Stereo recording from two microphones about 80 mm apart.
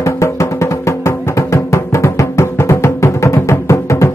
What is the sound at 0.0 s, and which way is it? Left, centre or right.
Music, left.